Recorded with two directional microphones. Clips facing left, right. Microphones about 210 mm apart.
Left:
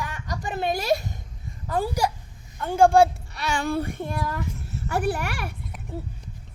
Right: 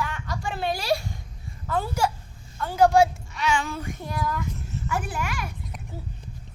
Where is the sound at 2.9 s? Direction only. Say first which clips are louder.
Left 2 dB; 35° left (ahead or behind).